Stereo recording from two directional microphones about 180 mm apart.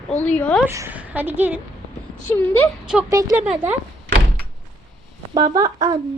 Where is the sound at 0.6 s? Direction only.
15° right (ahead or behind).